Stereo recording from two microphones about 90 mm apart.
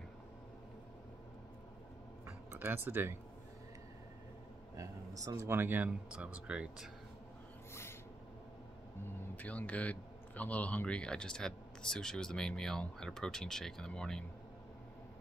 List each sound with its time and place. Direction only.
2.5 s speech: 25° right (ahead or behind)
4.7 s speech: 40° right (ahead or behind); by 6.9 s 10° right (ahead or behind)
9.3 s speech: 15° left (ahead or behind)